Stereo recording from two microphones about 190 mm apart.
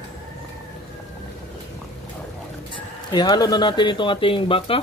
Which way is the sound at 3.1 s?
20° left (ahead or behind).